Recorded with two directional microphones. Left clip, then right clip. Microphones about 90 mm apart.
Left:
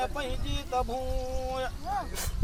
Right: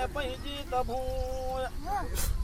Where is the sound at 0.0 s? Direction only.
10° left (ahead or behind).